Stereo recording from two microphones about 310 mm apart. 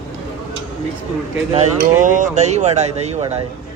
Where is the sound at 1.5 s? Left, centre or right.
Right.